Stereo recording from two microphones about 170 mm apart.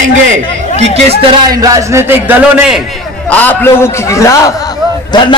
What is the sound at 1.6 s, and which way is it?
A man's voice, 20° right (ahead or behind).